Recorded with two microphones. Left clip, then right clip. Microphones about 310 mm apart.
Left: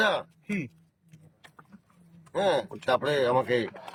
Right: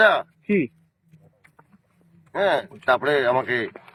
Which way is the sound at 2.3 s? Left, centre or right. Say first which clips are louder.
Right 4 dB; centre.